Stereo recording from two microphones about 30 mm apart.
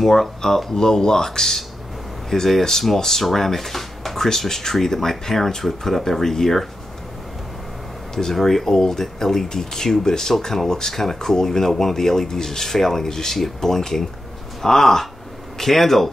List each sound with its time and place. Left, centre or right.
0.0 s speech: centre
0.7 s speech: centre
8.1 s speech: centre